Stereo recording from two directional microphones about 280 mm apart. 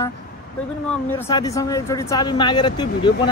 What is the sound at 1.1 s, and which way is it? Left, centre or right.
Speech, centre.